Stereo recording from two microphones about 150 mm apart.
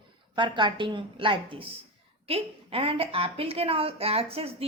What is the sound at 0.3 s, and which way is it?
A woman's voice, 30° right (ahead or behind).